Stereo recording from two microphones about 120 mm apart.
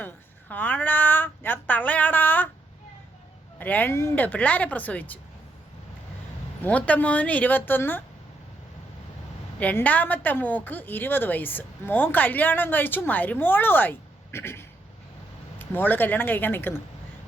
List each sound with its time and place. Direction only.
0.0 s a woman's voice: 15° left (ahead or behind)
3.6 s a woman's voice: 15° left (ahead or behind)
6.6 s a woman's voice: 10° left (ahead or behind)
9.6 s a woman's voice: 15° left (ahead or behind)